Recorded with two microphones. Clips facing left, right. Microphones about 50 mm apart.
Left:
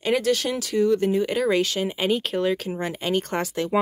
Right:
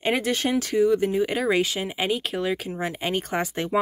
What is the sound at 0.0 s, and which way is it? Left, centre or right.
Speech, right.